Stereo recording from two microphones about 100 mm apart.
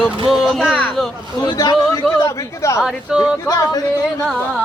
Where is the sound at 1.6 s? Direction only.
35° left (ahead or behind).